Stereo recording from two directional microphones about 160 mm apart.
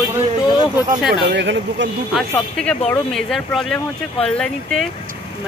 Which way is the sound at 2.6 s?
5° left (ahead or behind).